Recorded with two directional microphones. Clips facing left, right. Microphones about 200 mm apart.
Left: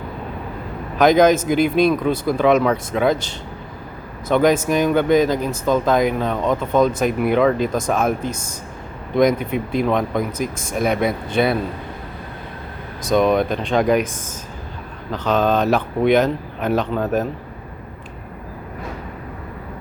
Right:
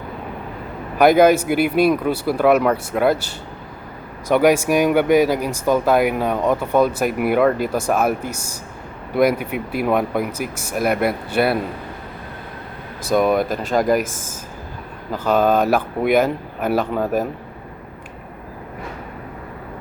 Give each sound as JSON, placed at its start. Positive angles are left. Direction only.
{"t": 0.9, "sound": "speech", "side_deg": -10}
{"t": 13.1, "sound": "speech", "side_deg": -5}
{"t": 15.1, "sound": "speech", "side_deg": -10}